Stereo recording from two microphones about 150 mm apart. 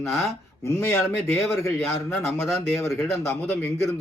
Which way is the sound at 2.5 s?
20° left (ahead or behind).